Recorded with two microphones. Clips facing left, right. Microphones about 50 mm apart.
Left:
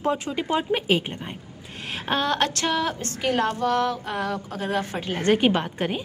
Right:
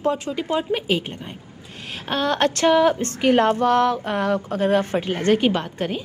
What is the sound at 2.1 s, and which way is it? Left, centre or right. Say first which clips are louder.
Speech: right 3 dB; centre.